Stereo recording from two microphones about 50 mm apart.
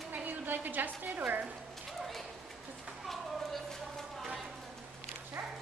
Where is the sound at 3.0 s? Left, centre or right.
Centre.